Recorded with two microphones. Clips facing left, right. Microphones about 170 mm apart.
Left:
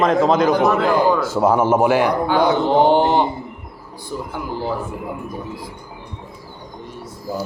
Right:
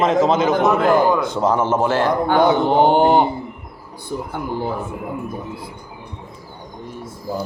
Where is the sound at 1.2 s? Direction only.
5° left (ahead or behind).